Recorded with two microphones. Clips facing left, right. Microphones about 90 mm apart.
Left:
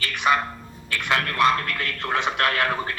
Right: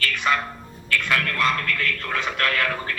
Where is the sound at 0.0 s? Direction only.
20° left (ahead or behind).